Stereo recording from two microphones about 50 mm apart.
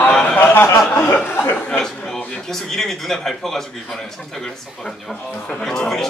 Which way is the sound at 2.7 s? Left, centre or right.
Centre.